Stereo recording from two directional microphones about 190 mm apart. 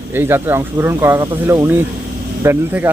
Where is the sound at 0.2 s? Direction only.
10° right (ahead or behind).